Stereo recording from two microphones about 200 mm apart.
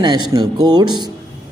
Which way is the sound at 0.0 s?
20° right (ahead or behind).